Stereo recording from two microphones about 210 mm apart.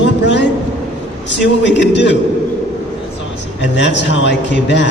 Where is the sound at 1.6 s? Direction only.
55° left (ahead or behind).